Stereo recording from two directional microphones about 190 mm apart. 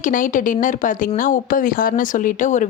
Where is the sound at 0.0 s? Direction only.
45° left (ahead or behind).